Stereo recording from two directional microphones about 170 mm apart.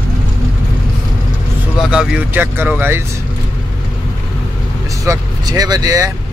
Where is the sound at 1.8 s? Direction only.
5° right (ahead or behind).